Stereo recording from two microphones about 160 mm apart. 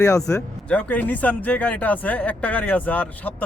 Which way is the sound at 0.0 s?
20° left (ahead or behind).